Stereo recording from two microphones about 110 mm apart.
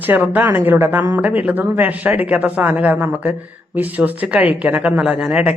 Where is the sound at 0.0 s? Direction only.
15° right (ahead or behind).